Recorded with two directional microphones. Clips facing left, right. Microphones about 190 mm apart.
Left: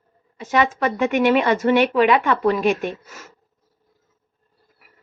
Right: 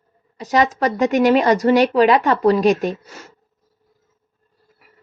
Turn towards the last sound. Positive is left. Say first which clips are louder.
# right 4 dB
turn(degrees=-35)  # may be behind; listen again after turning